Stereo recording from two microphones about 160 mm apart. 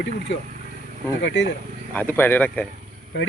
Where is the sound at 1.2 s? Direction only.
90° left.